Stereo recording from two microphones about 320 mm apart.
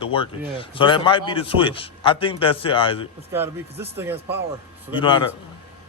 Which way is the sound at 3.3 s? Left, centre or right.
Centre.